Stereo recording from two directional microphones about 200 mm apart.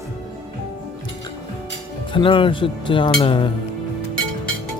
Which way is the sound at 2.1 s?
25° left (ahead or behind).